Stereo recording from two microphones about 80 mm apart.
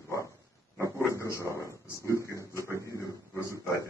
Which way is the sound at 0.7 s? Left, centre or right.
Right.